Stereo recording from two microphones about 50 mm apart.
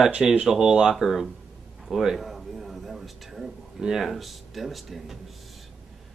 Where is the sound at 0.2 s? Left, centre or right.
Centre.